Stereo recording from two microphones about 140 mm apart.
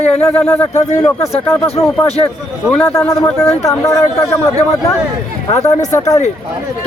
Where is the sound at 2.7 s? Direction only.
15° left (ahead or behind).